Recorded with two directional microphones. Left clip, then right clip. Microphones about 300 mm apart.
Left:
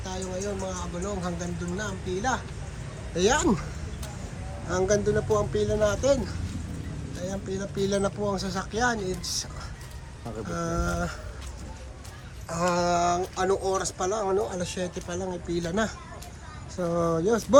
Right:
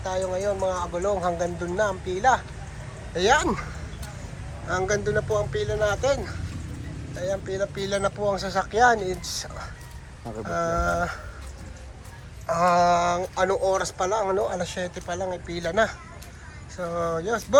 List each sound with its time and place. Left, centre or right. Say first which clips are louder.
0.0 s speech: right 7 dB; centre
4.7 s speech: even; centre
12.5 s speech: right 6 dB; centre